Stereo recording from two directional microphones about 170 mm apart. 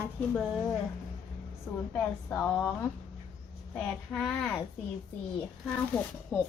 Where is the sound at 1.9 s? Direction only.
10° left (ahead or behind).